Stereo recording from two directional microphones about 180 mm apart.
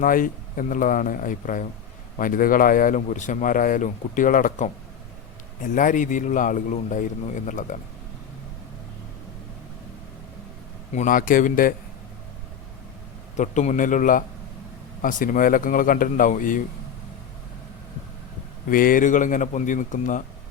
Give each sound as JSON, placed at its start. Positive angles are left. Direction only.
{"t": 0.0, "sound": "speech", "side_deg": 50}
{"t": 10.9, "sound": "speech", "side_deg": 45}
{"t": 13.3, "sound": "speech", "side_deg": 40}
{"t": 18.7, "sound": "speech", "side_deg": 50}